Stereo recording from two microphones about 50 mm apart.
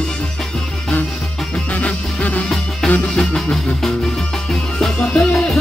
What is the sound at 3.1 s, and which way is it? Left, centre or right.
Music, centre.